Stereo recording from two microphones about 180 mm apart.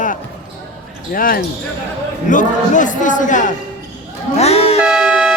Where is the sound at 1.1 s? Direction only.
50° left (ahead or behind).